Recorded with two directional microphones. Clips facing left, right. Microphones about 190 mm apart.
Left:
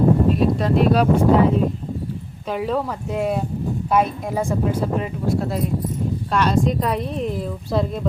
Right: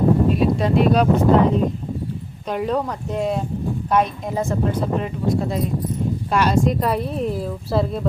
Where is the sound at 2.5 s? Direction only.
Centre (ahead or behind).